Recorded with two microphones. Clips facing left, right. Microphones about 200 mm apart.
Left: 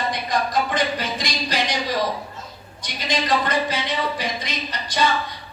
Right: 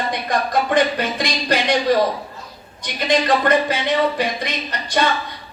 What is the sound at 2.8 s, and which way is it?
Speech, 55° right (ahead or behind).